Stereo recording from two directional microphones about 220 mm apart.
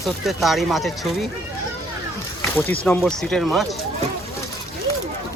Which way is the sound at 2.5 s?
10° left (ahead or behind).